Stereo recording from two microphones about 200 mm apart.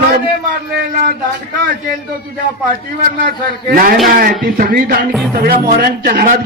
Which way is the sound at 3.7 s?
45° right (ahead or behind).